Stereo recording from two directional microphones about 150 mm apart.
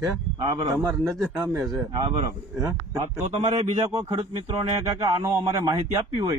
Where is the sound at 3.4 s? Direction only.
45° right (ahead or behind).